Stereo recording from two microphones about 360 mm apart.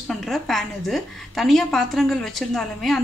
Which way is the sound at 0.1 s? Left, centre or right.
Centre.